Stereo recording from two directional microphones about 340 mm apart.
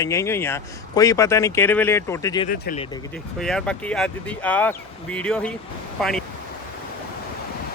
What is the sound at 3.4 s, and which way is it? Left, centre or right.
Speech, centre.